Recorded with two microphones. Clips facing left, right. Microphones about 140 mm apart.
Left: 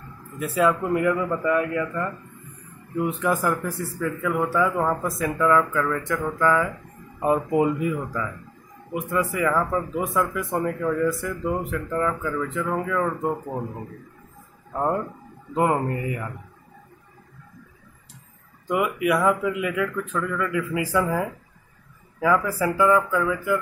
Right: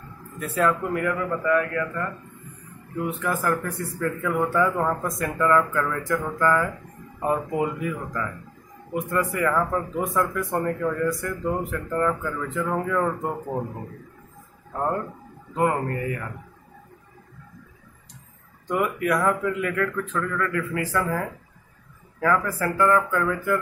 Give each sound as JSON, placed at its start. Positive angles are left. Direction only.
{"t": 0.4, "sound": "a man's voice", "side_deg": 10}
{"t": 4.0, "sound": "a man's voice", "side_deg": 5}
{"t": 7.2, "sound": "a man's voice", "side_deg": 15}
{"t": 15.5, "sound": "speech", "side_deg": 20}
{"t": 18.7, "sound": "a man's voice", "side_deg": 10}